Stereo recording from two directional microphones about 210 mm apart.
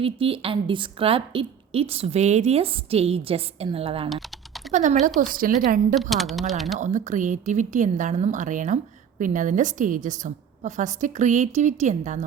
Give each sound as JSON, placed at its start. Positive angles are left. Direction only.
{"t": 0.0, "sound": "a woman's voice", "side_deg": -25}
{"t": 5.9, "sound": "a woman's voice", "side_deg": 0}
{"t": 6.7, "sound": "speech", "side_deg": -35}